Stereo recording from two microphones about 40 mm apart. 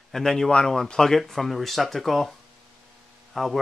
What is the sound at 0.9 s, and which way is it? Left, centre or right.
Speech, centre.